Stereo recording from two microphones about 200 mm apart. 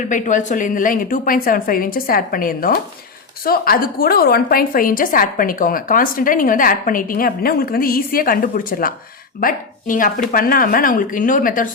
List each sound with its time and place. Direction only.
0.1 s a woman's voice: 40° left (ahead or behind)